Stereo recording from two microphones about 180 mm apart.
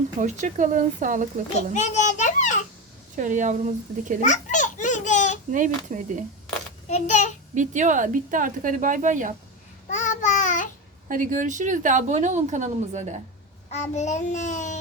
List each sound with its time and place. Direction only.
0.2 s a woman's voice: 45° right (ahead or behind)
1.7 s children playing: 40° left (ahead or behind)
3.2 s a woman's voice: 45° right (ahead or behind)
4.2 s baby laughter: 45° left (ahead or behind)
5.5 s a woman's voice: 45° right (ahead or behind)
6.8 s a child's voice: 40° left (ahead or behind)
7.5 s a woman's voice: 45° right (ahead or behind)
9.9 s babbling: 40° left (ahead or behind)
11.1 s a woman's voice: 45° right (ahead or behind)
13.7 s a child's voice: 40° left (ahead or behind)